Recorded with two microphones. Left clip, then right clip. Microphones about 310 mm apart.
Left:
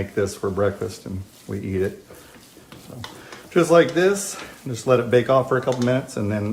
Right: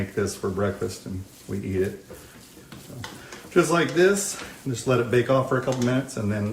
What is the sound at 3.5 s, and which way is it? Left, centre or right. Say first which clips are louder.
Speech: left 4 dB; left.